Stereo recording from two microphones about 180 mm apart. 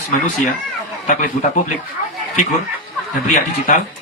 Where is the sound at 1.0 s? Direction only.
45° left (ahead or behind).